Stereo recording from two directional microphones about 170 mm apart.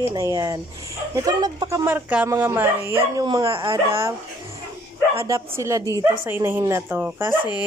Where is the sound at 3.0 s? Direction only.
25° right (ahead or behind).